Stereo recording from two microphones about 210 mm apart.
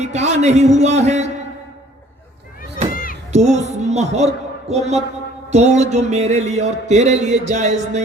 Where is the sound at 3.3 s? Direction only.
35° right (ahead or behind).